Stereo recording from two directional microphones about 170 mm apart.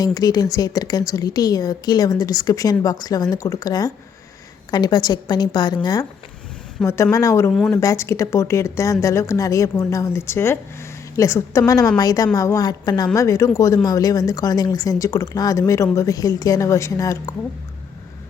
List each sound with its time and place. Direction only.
0.0 s speech: 20° left (ahead or behind)